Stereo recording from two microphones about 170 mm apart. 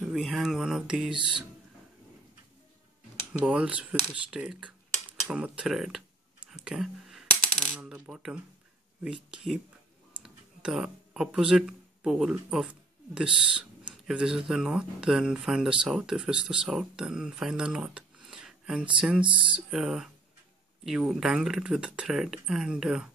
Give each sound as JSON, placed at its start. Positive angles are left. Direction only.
{"t": 0.0, "sound": "speech", "side_deg": 0}
{"t": 3.4, "sound": "speech", "side_deg": -5}
{"t": 5.3, "sound": "a sound", "side_deg": -5}
{"t": 7.8, "sound": "coin", "side_deg": -5}
{"t": 9.0, "sound": "speech", "side_deg": -5}
{"t": 19.2, "sound": "speech", "side_deg": -30}
{"t": 19.5, "sound": "speech", "side_deg": -5}